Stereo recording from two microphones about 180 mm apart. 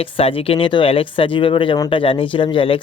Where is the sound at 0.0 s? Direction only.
30° left (ahead or behind).